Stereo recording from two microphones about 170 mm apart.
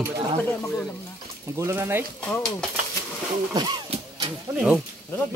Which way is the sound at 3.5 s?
30° right (ahead or behind).